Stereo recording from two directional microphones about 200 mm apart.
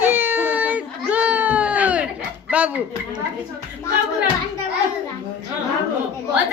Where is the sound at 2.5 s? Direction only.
5° right (ahead or behind).